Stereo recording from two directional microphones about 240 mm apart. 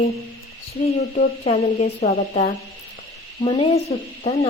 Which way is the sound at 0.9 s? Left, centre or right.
Left.